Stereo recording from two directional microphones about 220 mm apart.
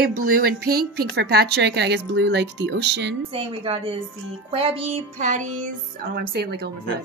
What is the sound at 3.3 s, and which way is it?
Speech, 25° right (ahead or behind).